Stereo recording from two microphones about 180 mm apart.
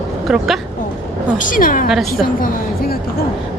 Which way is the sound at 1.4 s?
50° left (ahead or behind).